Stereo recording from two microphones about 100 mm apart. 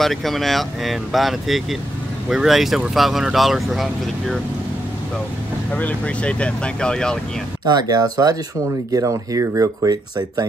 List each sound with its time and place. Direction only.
0.0 s speech: centre (ahead or behind)
5.7 s speech: 15° left (ahead or behind)
7.7 s speech: 40° right (ahead or behind)